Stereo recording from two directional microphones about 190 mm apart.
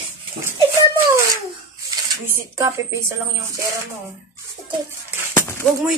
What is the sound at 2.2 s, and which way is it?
Speech, 15° right (ahead or behind).